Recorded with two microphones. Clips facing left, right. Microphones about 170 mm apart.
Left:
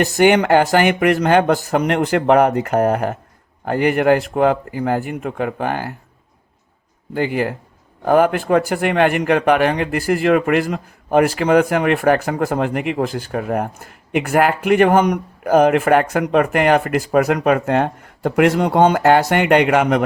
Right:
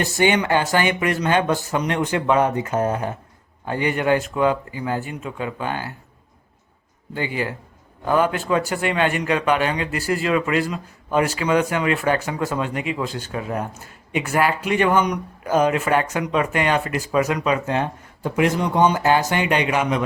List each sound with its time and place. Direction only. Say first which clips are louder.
0.3 s speech: left 7 dB; 55° left (ahead or behind)
7.1 s a man's voice: left 6 dB; 50° left (ahead or behind)